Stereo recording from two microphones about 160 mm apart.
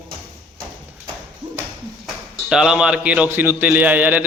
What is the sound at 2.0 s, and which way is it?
A man's voice, 5° right (ahead or behind).